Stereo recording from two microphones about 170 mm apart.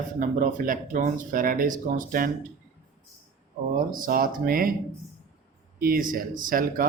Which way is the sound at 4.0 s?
55° right (ahead or behind).